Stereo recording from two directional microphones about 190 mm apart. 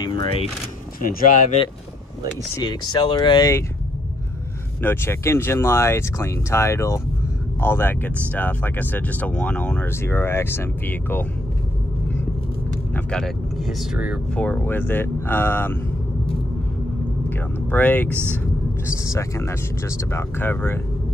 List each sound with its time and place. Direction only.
0.0 s speech: 25° left (ahead or behind)
1.2 s speech: 40° left (ahead or behind)
2.5 s speech: 20° left (ahead or behind)
4.8 s speech: 15° left (ahead or behind)
12.9 s speech: 5° left (ahead or behind)
14.3 s speech: 5° left (ahead or behind)
17.6 s speech: 10° left (ahead or behind)
18.1 s speech: 10° right (ahead or behind)
18.9 s speech: 15° left (ahead or behind)